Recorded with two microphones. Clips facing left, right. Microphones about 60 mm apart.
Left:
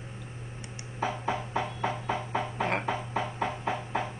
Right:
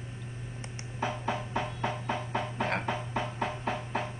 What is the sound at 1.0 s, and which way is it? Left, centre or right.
Music, centre.